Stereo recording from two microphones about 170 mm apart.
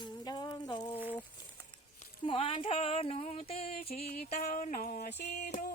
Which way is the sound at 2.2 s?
35° left (ahead or behind).